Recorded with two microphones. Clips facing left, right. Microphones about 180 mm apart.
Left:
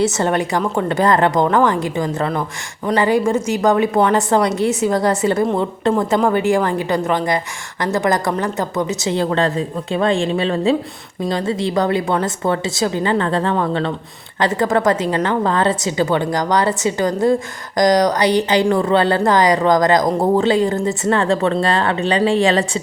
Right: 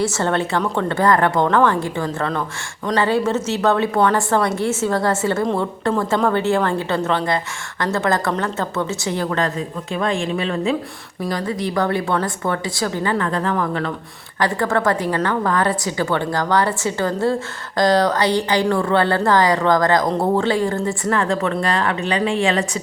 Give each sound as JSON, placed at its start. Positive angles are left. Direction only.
{"t": 0.0, "sound": "a woman's voice", "side_deg": 20}